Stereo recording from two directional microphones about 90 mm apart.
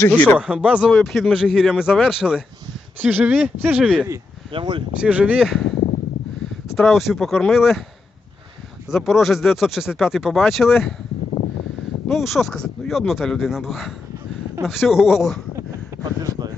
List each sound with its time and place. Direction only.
0.3 s speech: 15° right (ahead or behind)
0.9 s speech: 5° left (ahead or behind)
3.0 s speech: 20° right (ahead or behind)
4.5 s speech: 60° right (ahead or behind)
4.9 s speech: 15° right (ahead or behind)
5.4 s speech: centre (ahead or behind)
6.7 s speech: centre (ahead or behind)
9.0 s speech: centre (ahead or behind)
12.0 s speech: centre (ahead or behind)
16.0 s speech: 45° right (ahead or behind)